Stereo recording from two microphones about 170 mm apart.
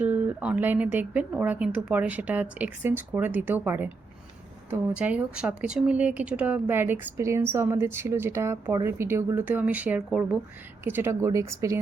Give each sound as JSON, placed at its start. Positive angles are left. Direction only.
{"t": 0.0, "sound": "a woman's voice", "side_deg": -10}